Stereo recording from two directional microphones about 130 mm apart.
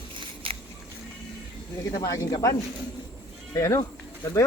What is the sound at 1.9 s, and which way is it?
Speech, 25° left (ahead or behind).